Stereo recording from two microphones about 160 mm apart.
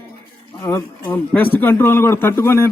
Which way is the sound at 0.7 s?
15° left (ahead or behind).